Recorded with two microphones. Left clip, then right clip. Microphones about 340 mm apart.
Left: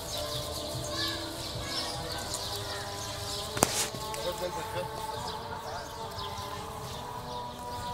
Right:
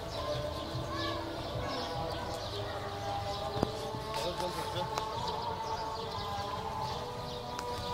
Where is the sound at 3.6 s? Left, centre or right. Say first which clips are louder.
Left 9 dB; left.